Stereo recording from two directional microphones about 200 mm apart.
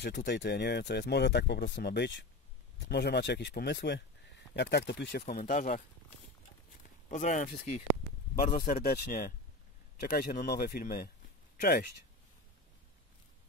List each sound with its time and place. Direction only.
0.0 s speech: 55° left (ahead or behind)
5.2 s speech: 40° left (ahead or behind)
7.1 s speech: 40° left (ahead or behind)
8.6 s speech: 50° left (ahead or behind)